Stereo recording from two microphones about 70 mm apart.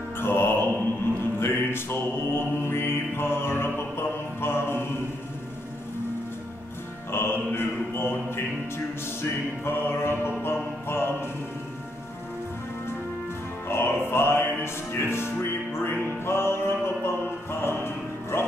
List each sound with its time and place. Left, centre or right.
0.2 s music: left
1.4 s mantra: left
7.1 s music: left
13.7 s music: left